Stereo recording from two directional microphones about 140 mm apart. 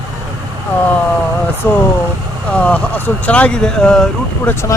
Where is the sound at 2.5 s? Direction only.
10° left (ahead or behind).